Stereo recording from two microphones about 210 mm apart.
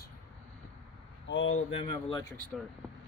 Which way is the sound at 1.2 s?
65° left (ahead or behind).